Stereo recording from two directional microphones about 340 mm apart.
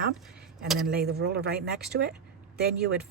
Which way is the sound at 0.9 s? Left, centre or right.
Right.